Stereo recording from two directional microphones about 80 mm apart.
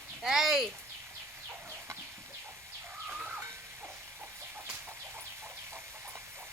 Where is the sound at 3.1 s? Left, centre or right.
Centre.